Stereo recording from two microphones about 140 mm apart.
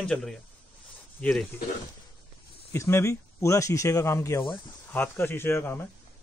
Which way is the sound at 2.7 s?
20° left (ahead or behind).